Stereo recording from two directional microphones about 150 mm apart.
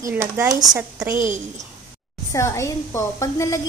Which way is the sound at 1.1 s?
60° right (ahead or behind).